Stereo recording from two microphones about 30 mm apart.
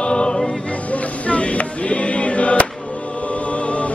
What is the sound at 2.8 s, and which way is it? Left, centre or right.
Choir, left.